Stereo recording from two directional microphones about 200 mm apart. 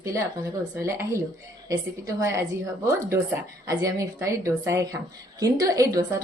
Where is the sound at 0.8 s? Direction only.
15° right (ahead or behind).